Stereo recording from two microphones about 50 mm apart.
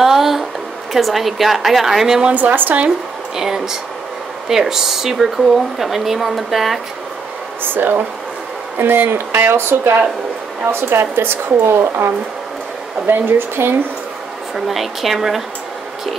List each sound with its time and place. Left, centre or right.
0.0 s a sound: centre
0.9 s speech: centre
2.2 s speech: right
3.3 s speech: centre
7.6 s a woman's voice: right
14.5 s speech: centre